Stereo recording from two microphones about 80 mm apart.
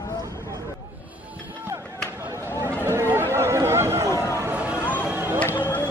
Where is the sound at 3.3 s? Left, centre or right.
Right.